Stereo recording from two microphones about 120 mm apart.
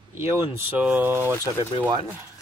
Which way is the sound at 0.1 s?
20° right (ahead or behind).